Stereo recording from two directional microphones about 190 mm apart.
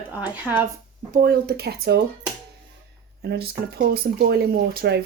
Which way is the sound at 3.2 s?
55° right (ahead or behind).